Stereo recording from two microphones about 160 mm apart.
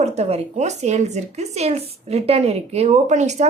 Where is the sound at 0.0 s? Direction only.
45° right (ahead or behind).